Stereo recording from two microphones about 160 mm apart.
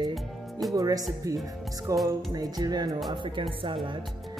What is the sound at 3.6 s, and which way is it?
Speech, 30° right (ahead or behind).